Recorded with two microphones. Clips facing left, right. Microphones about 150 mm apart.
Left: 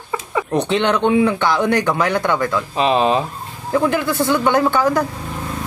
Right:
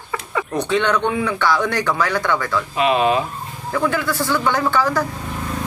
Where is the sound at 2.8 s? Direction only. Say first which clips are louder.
Left 1 dB; 30° left (ahead or behind).